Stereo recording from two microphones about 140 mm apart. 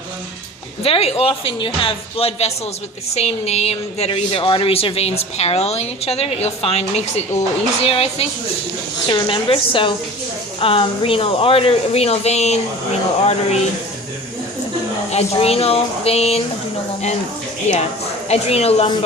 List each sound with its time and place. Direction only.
0.8 s a woman's voice: 45° left (ahead or behind)
15.1 s a woman's voice: 45° left (ahead or behind)
17.7 s a woman's voice: 50° left (ahead or behind)